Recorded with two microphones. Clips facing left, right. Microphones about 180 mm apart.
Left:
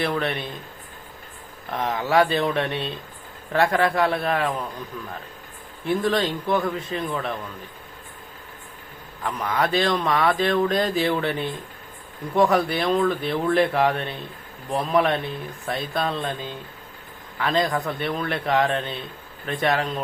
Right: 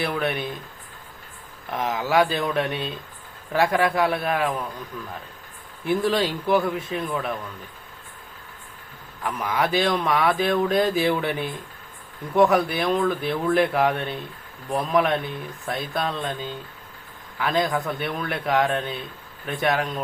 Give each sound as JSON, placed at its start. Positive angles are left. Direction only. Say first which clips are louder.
{"t": 0.0, "sound": "speech", "louder": "even", "side_deg": -5}
{"t": 1.7, "sound": "speech", "louder": "left 1 dB", "side_deg": 0}
{"t": 5.8, "sound": "speech", "louder": "even", "side_deg": -5}
{"t": 9.2, "sound": "speech", "louder": "even", "side_deg": -5}